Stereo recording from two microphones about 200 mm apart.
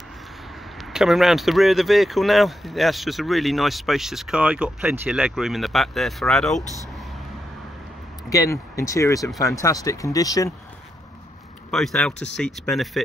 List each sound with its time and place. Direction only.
0.7 s speech: centre (ahead or behind)
6.6 s speech: 15° right (ahead or behind)
8.3 s speech: 15° left (ahead or behind)
11.7 s speech: centre (ahead or behind)